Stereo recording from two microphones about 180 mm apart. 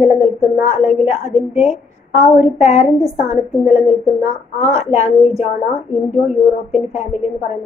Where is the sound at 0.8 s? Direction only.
40° left (ahead or behind).